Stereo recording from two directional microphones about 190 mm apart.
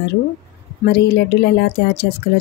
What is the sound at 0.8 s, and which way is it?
Speech, 60° left (ahead or behind).